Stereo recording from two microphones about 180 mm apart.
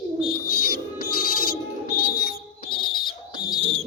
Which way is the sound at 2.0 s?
55° left (ahead or behind).